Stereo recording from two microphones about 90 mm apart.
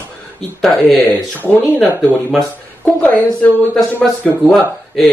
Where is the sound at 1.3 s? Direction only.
20° left (ahead or behind).